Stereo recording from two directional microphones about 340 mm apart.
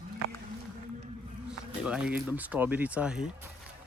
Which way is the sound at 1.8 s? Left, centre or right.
Centre.